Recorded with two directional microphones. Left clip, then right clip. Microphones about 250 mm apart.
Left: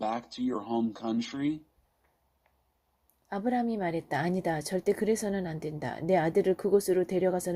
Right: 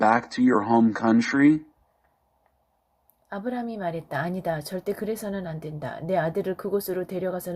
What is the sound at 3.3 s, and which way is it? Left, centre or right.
Speech, left.